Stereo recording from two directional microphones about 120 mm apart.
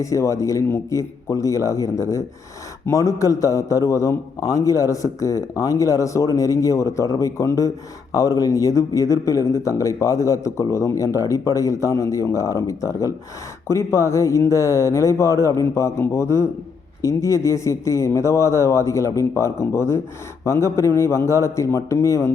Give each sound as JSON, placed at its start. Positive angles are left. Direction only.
{"t": 0.0, "sound": "a man's voice", "side_deg": 25}